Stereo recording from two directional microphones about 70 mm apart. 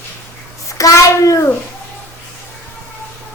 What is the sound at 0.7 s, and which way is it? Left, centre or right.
Speech, left.